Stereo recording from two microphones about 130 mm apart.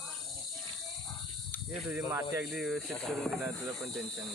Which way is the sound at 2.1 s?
25° right (ahead or behind).